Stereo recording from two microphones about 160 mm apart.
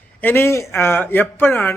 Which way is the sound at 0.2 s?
15° left (ahead or behind).